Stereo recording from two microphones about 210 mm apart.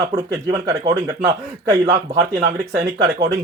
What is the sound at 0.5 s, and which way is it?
Speech, 15° right (ahead or behind).